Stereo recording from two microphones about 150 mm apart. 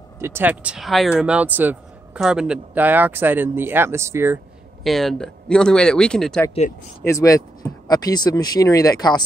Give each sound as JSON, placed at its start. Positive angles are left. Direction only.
{"t": 0.2, "sound": "speech", "side_deg": -15}
{"t": 4.8, "sound": "speech", "side_deg": 0}
{"t": 7.0, "sound": "speech", "side_deg": 20}